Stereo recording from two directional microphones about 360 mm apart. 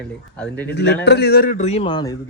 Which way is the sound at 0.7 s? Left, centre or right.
Left.